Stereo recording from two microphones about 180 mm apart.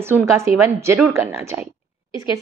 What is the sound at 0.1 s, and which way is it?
A woman's voice, 15° right (ahead or behind).